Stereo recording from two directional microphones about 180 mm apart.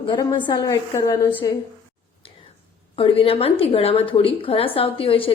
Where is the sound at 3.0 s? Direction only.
30° left (ahead or behind).